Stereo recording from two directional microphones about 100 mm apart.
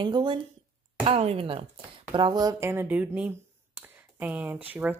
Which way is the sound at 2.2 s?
40° right (ahead or behind).